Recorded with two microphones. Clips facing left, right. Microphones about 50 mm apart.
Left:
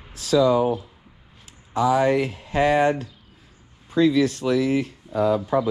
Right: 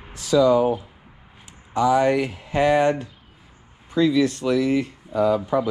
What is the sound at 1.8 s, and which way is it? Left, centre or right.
Speech, right.